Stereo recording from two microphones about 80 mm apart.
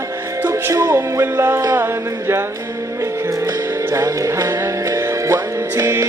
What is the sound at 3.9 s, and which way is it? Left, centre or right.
Music, right.